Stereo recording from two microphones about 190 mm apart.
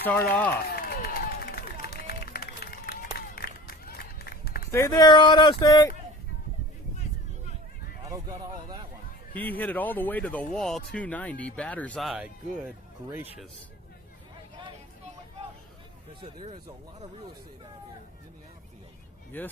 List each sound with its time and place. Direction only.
0.0 s speech: 10° left (ahead or behind)
0.8 s run: 50° left (ahead or behind)
4.7 s speech: 20° left (ahead or behind)
8.0 s speech: 20° right (ahead or behind)
9.3 s speech: 10° left (ahead or behind)
16.4 s speech: 25° right (ahead or behind)
19.3 s speech: 10° left (ahead or behind)